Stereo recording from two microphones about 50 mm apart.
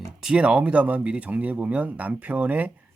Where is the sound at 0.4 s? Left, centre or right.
Right.